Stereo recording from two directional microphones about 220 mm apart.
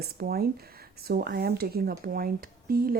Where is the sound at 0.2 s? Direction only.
45° right (ahead or behind).